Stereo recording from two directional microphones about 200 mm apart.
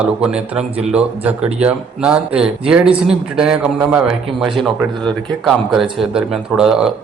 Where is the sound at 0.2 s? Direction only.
5° right (ahead or behind).